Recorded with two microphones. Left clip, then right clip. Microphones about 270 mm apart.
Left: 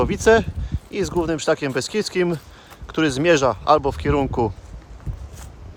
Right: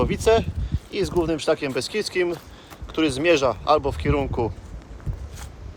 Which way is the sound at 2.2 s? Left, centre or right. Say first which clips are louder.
Left 2 dB; left.